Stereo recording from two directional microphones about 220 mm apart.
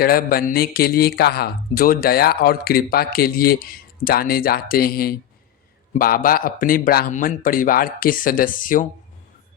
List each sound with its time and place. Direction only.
0.0 s a man's voice: 40° left (ahead or behind)